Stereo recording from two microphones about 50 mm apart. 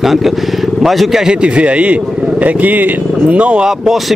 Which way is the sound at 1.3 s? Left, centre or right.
Right.